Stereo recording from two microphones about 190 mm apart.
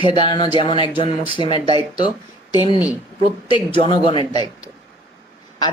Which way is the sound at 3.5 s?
25° left (ahead or behind).